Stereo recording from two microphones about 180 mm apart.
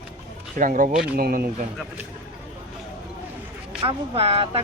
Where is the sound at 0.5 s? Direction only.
45° right (ahead or behind).